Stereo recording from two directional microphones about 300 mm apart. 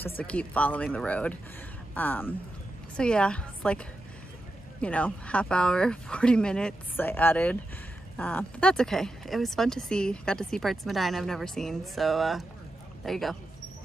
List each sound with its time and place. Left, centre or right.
0.2 s speech: centre
4.8 s speech: centre